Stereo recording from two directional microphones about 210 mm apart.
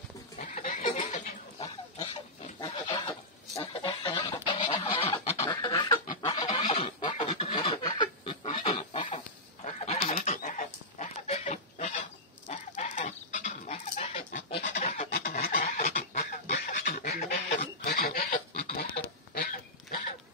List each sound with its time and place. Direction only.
0.4 s neigh: 30° left (ahead or behind)
2.6 s livestock: 20° left (ahead or behind)
6.2 s a sound: 20° left (ahead or behind)
9.8 s fowl: 30° left (ahead or behind)
11.2 s goose: 30° left (ahead or behind)
14.8 s a sound: 35° left (ahead or behind)
15.5 s fowl: 40° left (ahead or behind)
17.1 s goose: 50° left (ahead or behind)
19.3 s a sound: 40° left (ahead or behind)